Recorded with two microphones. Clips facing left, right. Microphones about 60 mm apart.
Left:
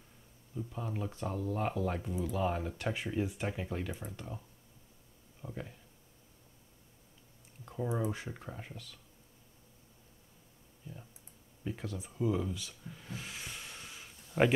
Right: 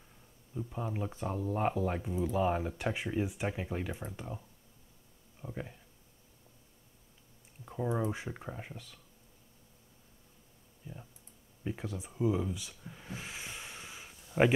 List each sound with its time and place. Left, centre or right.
0.6 s speech: centre
5.4 s speech: centre
7.6 s speech: centre
10.9 s speech: centre